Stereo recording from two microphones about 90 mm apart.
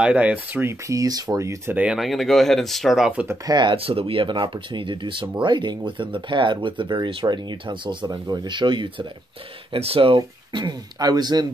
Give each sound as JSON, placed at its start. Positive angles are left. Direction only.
{"t": 0.0, "sound": "speech", "side_deg": -15}
{"t": 0.8, "sound": "speech", "side_deg": -40}
{"t": 1.7, "sound": "speech", "side_deg": -15}
{"t": 2.0, "sound": "speech", "side_deg": 0}
{"t": 3.4, "sound": "speech", "side_deg": -55}
{"t": 3.7, "sound": "speech", "side_deg": -85}
{"t": 9.7, "sound": "speech", "side_deg": -90}